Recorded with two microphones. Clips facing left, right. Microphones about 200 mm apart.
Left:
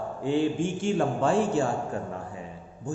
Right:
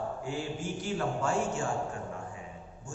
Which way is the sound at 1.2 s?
30° left (ahead or behind).